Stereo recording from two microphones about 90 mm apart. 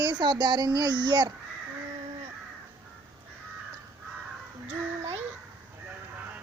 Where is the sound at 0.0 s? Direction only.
55° right (ahead or behind).